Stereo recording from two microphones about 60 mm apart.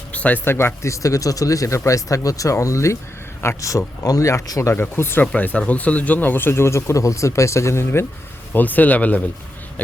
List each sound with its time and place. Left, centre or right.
0.1 s a sound: left
0.4 s speech: left
4.7 s speech: left
5.2 s speech: left
8.5 s speech: left